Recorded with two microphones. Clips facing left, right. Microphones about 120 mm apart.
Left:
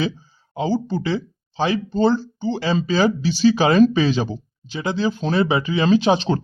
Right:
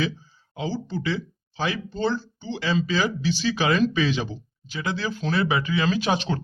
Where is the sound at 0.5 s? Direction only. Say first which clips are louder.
Left 7 dB; 35° left (ahead or behind).